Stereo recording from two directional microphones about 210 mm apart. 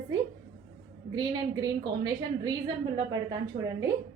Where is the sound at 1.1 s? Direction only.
20° right (ahead or behind).